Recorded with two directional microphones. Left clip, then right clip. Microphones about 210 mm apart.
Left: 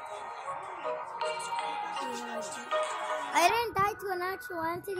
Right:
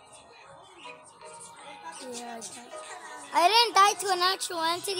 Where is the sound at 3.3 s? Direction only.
Centre (ahead or behind).